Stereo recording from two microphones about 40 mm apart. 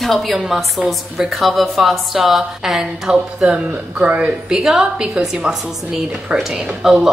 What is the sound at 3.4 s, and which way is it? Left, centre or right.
A woman's voice, right.